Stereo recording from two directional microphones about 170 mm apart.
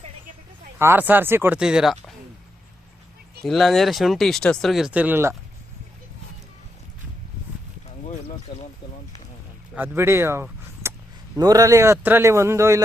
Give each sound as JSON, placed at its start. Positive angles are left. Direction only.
{"t": 0.8, "sound": "speech", "side_deg": -15}
{"t": 3.4, "sound": "speech", "side_deg": 0}
{"t": 8.5, "sound": "speech", "side_deg": 30}
{"t": 9.7, "sound": "speech", "side_deg": -10}